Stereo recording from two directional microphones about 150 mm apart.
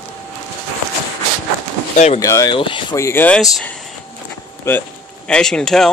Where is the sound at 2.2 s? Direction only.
20° left (ahead or behind).